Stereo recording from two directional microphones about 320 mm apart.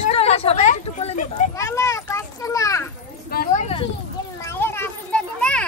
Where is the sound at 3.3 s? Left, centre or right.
Left.